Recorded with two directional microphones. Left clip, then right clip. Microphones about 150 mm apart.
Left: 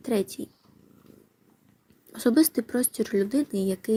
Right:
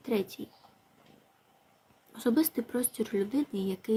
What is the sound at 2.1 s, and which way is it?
Speech, 45° left (ahead or behind).